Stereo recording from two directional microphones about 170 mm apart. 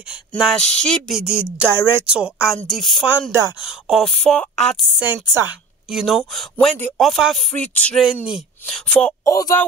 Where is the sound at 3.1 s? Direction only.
15° right (ahead or behind).